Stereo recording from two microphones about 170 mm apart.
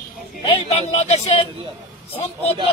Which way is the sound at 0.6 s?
40° left (ahead or behind).